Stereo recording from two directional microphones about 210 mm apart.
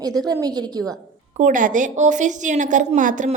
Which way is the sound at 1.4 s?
40° right (ahead or behind).